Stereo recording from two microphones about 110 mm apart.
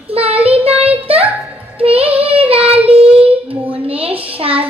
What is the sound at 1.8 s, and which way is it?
Child singing, 60° right (ahead or behind).